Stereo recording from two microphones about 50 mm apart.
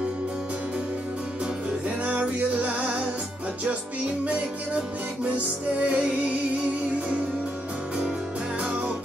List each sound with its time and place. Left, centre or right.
2.0 s music: right
4.2 s music: right
5.9 s music: right